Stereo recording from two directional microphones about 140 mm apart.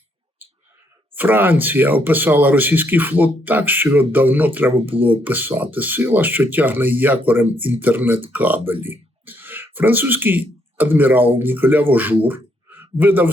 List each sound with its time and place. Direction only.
1.1 s speech: 15° right (ahead or behind)
4.7 s speech: 45° right (ahead or behind)
5.2 s speech: 15° right (ahead or behind)